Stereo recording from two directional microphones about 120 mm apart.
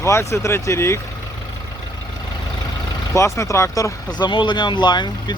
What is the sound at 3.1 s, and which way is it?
Speech, 25° left (ahead or behind).